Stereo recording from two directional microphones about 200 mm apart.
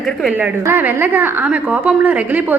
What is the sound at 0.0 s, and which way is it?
A woman's voice, centre (ahead or behind).